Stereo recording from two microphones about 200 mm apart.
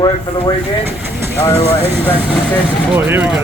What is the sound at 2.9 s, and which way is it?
Speech, 10° right (ahead or behind).